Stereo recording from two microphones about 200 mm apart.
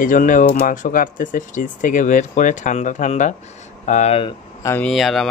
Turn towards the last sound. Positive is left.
turn(degrees=0)  # may be behind; listen again after turning